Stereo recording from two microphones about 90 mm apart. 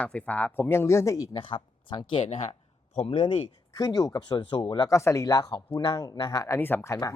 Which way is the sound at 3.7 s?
45° left (ahead or behind).